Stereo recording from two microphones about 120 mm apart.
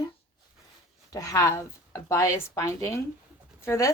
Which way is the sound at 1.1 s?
30° left (ahead or behind).